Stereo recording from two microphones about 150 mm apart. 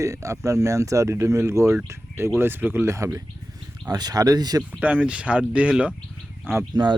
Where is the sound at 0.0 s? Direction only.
20° right (ahead or behind).